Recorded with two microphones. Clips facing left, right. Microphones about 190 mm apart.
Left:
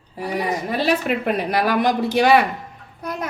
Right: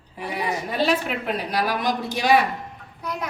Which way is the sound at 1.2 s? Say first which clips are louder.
Left 5 dB; 55° left (ahead or behind).